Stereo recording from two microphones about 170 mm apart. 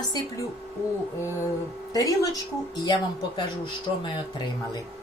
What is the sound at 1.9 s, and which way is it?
Speech, 20° left (ahead or behind).